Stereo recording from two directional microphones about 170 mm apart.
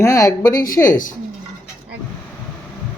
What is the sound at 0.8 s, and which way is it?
Speech, 50° left (ahead or behind).